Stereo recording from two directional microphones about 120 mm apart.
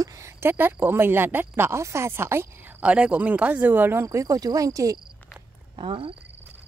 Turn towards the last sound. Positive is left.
turn(degrees=-50)  # may be behind; listen again after turning